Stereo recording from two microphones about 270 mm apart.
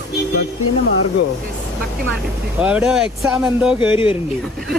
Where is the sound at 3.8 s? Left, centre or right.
Centre.